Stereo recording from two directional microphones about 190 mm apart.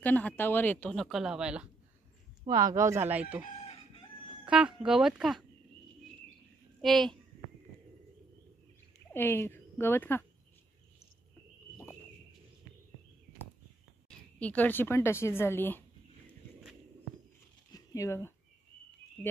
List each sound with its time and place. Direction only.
0.0 s a woman's voice: 10° left (ahead or behind)
2.4 s speech: 20° right (ahead or behind)
4.5 s speech: 5° right (ahead or behind)
6.8 s a child's voice: centre (ahead or behind)
9.1 s speech: 10° left (ahead or behind)
14.0 s speech: 5° left (ahead or behind)
17.7 s speech: 15° left (ahead or behind)